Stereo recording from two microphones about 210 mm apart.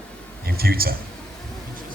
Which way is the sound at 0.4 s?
45° right (ahead or behind).